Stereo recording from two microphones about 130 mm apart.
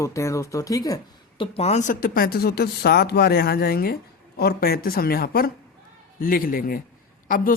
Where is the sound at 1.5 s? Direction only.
55° left (ahead or behind); by 2.2 s 90° left.